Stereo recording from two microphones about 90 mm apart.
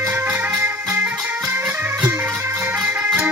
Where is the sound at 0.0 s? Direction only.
30° right (ahead or behind).